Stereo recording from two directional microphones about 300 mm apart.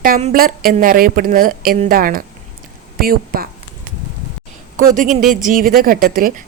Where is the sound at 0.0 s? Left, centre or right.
Right.